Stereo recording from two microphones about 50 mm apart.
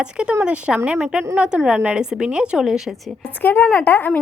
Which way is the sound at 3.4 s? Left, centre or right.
Left.